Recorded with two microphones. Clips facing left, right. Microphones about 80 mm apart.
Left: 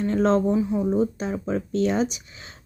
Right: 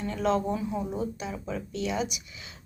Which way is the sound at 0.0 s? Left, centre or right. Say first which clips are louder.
Left 6 dB; left.